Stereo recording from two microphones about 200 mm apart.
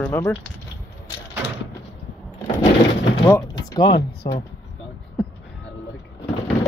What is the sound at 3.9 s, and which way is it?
Speech, 60° left (ahead or behind).